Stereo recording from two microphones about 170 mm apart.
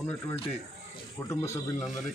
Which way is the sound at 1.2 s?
15° left (ahead or behind).